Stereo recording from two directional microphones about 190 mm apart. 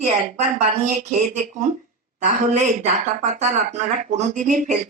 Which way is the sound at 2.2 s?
40° right (ahead or behind).